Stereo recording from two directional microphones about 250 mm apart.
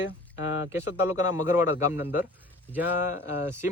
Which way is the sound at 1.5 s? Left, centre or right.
Centre.